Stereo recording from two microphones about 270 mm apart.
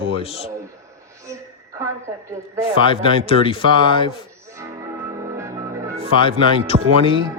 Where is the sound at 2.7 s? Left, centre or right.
Centre.